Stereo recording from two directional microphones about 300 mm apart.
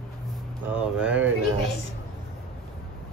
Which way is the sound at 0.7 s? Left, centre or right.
Centre.